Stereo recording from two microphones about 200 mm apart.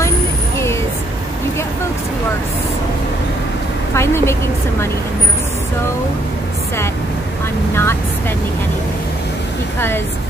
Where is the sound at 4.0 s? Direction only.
15° left (ahead or behind).